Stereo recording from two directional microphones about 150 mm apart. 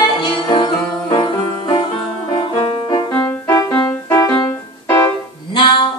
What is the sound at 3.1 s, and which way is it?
Music, 20° left (ahead or behind).